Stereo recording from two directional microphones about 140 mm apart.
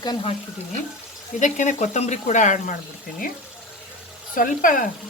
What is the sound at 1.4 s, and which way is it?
Speech, 60° left (ahead or behind).